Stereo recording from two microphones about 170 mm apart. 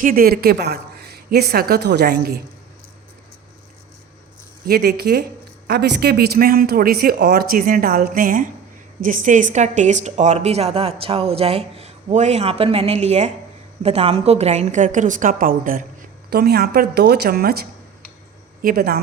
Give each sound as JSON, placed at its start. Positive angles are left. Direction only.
{"t": 0.0, "sound": "a woman's voice", "side_deg": -60}
{"t": 4.6, "sound": "a woman's voice", "side_deg": -70}